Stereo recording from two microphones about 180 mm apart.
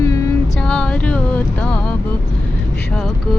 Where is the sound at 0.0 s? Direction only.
20° left (ahead or behind).